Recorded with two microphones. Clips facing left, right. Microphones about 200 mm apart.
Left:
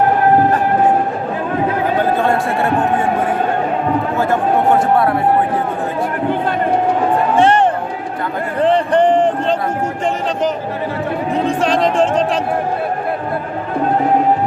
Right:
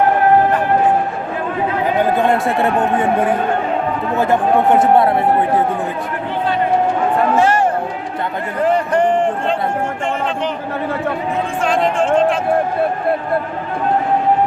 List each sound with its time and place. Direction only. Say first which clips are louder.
4.2 s speech: right 3 dB; 20° right (ahead or behind)
7.3 s speech: left 4 dB; 30° left (ahead or behind)
8.6 s a sound: left 2 dB; 30° left (ahead or behind)
11.4 s speech: left 2 dB; 35° left (ahead or behind)